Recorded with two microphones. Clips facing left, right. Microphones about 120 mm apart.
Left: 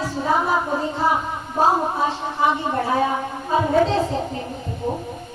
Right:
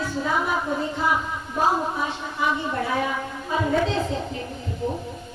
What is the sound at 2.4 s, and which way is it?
A woman's voice, 35° left (ahead or behind).